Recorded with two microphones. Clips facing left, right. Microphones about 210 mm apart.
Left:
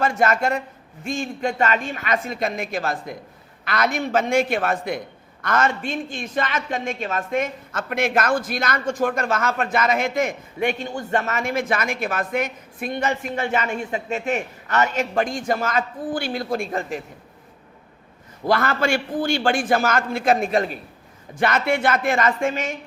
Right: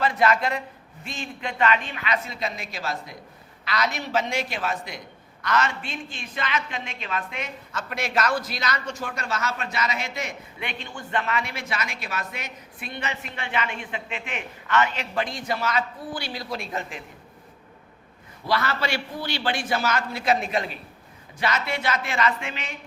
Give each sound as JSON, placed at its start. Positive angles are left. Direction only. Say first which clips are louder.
{"t": 0.0, "sound": "a man's voice", "louder": "left 2 dB", "side_deg": 45}
{"t": 18.4, "sound": "a man's voice", "louder": "left 6 dB", "side_deg": 50}